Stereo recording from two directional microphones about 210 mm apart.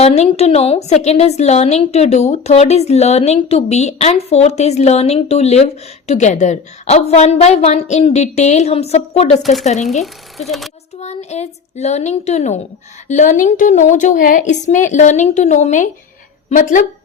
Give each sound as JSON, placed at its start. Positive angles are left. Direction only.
{"t": 0.0, "sound": "a woman's voice", "side_deg": 30}
{"t": 10.0, "sound": "speech", "side_deg": 0}
{"t": 11.0, "sound": "a woman's voice", "side_deg": 30}